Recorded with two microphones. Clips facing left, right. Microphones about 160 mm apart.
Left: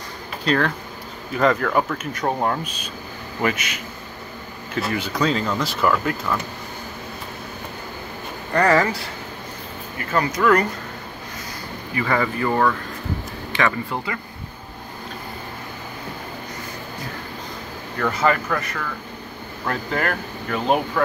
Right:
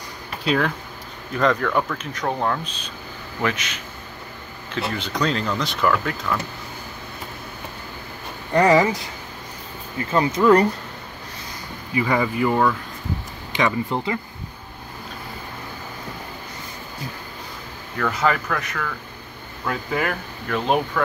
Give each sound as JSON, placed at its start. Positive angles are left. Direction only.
{"t": 0.5, "sound": "speech", "side_deg": -5}
{"t": 8.5, "sound": "speech", "side_deg": -15}
{"t": 10.1, "sound": "speech", "side_deg": -25}
{"t": 11.9, "sound": "speech", "side_deg": -15}
{"t": 17.9, "sound": "speech", "side_deg": 0}